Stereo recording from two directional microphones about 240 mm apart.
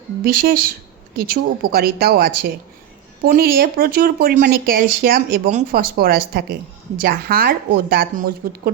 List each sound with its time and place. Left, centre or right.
0.2 s speech: right